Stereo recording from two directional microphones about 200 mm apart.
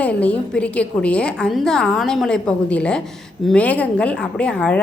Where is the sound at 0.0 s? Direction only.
5° left (ahead or behind).